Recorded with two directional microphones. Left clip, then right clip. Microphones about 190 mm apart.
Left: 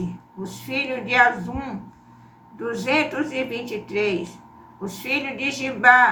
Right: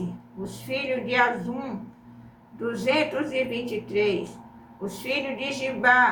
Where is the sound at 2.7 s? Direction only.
15° left (ahead or behind).